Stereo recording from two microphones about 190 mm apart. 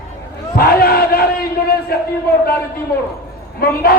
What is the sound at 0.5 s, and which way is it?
Battle cry, 50° left (ahead or behind).